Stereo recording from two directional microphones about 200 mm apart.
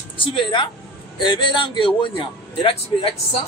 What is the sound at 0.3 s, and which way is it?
A man's voice, 25° left (ahead or behind).